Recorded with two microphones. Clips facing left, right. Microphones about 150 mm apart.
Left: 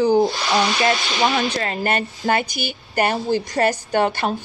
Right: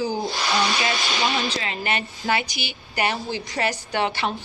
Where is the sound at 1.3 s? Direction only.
55° left (ahead or behind).